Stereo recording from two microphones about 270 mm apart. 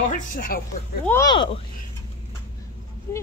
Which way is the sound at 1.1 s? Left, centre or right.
Centre.